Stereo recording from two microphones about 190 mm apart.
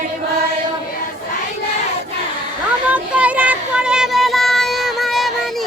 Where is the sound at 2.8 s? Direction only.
5° right (ahead or behind).